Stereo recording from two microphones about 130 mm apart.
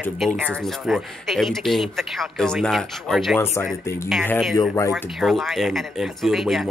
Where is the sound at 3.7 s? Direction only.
Centre (ahead or behind).